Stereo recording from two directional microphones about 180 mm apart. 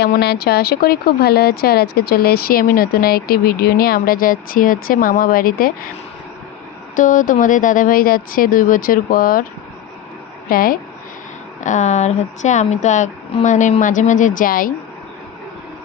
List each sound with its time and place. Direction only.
0.0 s speech: 65° left (ahead or behind)
6.9 s speech: 45° left (ahead or behind)
10.5 s speech: 50° left (ahead or behind)
11.6 s speech: 40° left (ahead or behind)